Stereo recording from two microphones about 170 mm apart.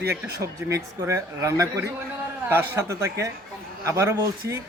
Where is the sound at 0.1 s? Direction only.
15° right (ahead or behind).